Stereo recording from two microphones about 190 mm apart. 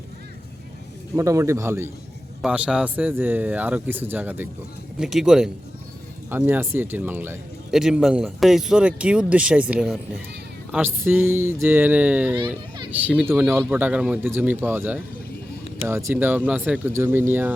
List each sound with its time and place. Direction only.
1.1 s speech: 15° right (ahead or behind)